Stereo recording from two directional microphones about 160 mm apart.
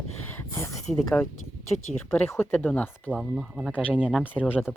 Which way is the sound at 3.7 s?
10° left (ahead or behind).